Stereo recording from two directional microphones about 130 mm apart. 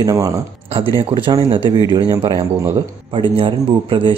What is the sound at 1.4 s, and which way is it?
Speech, 40° right (ahead or behind).